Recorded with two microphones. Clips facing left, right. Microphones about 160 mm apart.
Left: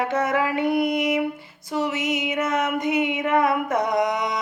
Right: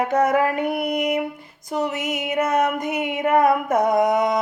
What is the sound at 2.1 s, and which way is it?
A woman's voice, 40° right (ahead or behind).